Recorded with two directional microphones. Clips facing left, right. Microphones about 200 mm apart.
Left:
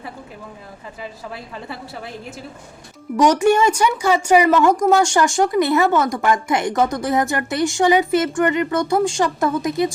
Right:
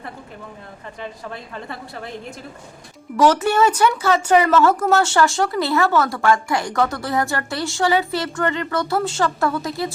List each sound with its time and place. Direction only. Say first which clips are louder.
1.0 s a woman's voice: even; 5° left (ahead or behind)
3.2 s speech: left 1 dB; 15° left (ahead or behind)